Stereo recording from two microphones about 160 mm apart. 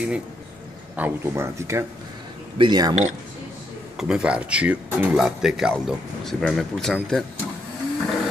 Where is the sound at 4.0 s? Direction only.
5° right (ahead or behind).